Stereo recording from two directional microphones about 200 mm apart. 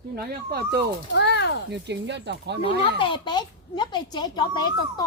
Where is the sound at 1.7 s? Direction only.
60° right (ahead or behind).